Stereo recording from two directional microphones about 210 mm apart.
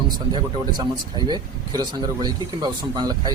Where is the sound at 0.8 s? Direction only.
20° right (ahead or behind).